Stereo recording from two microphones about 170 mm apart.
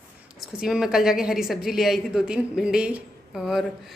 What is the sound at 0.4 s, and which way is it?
A woman's voice, 5° right (ahead or behind).